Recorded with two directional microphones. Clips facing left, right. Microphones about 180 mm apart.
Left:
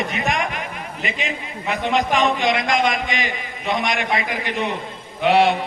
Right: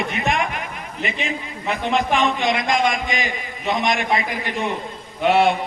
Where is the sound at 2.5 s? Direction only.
50° left (ahead or behind).